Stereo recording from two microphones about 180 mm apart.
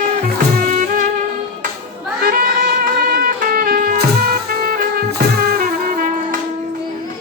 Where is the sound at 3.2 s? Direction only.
55° right (ahead or behind).